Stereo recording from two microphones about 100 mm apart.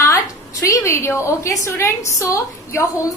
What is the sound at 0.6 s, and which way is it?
A woman's voice, 30° left (ahead or behind).